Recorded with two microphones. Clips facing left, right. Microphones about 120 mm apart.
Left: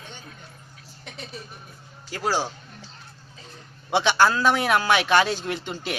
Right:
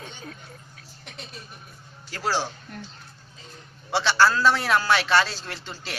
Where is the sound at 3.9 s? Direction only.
15° left (ahead or behind).